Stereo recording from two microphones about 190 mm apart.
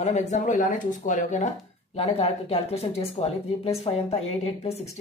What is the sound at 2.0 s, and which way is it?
Speech, 30° left (ahead or behind).